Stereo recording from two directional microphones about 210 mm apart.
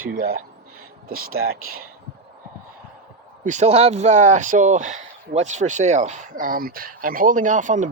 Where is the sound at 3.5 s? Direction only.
35° right (ahead or behind).